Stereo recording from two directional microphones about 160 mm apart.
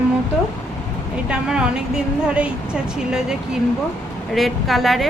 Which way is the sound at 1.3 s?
5° right (ahead or behind).